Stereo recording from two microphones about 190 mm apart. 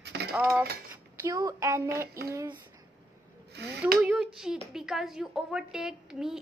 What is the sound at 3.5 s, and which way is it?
Speech, 60° right (ahead or behind).